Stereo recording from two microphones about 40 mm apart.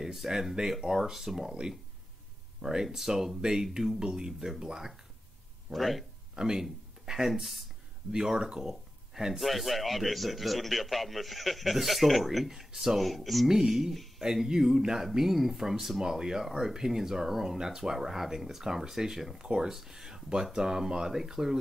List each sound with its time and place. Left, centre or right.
0.0 s speech: centre
2.6 s speech: centre
5.7 s a man's voice: centre
6.3 s speech: centre
9.4 s a man's voice: centre
13.5 s a man's voice: centre